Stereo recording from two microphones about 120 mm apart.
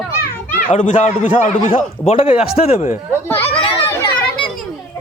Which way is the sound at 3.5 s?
45° left (ahead or behind).